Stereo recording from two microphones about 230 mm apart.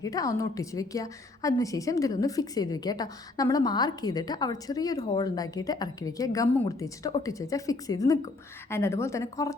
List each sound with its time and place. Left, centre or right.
0.0 s a woman's voice: centre